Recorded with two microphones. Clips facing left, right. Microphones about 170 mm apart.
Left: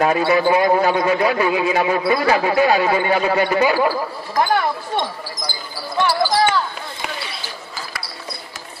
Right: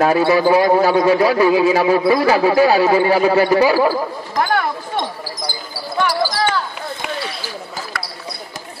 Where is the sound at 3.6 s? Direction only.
35° right (ahead or behind).